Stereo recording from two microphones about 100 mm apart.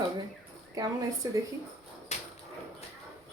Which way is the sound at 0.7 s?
35° right (ahead or behind).